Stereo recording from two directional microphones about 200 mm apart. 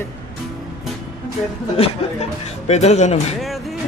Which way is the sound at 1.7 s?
30° left (ahead or behind).